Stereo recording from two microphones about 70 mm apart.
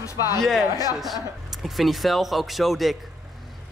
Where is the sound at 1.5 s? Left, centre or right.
Centre.